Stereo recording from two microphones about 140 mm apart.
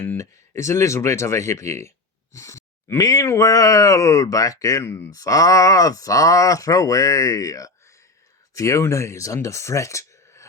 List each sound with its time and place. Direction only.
0.0 s speech: 15° left (ahead or behind)